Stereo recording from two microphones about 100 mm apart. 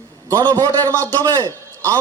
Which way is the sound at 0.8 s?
20° left (ahead or behind).